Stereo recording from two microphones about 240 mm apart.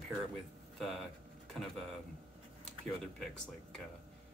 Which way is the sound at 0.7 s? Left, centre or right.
Centre.